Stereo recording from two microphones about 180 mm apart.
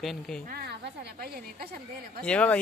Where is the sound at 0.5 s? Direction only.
65° right (ahead or behind).